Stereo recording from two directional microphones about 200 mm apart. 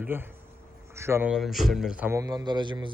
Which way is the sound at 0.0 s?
10° right (ahead or behind).